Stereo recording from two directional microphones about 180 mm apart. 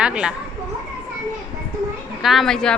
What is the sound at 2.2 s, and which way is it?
Speech, centre (ahead or behind).